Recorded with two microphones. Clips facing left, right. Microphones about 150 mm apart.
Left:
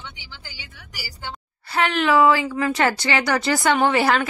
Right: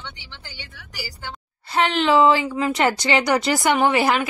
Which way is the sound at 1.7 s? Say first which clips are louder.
Right 1 dB; 25° right (ahead or behind).